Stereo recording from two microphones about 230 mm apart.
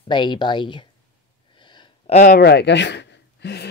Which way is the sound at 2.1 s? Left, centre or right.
Left.